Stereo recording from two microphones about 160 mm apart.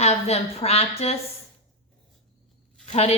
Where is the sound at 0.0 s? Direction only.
40° left (ahead or behind).